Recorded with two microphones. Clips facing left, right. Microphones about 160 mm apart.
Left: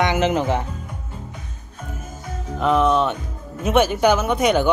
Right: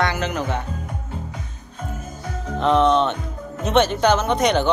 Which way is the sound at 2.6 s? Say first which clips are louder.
Right 1 dB; 5° left (ahead or behind).